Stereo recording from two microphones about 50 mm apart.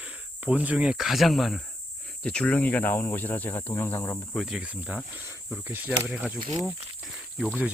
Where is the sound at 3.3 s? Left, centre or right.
Left.